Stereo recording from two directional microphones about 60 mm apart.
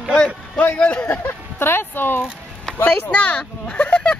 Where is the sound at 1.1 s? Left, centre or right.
Left.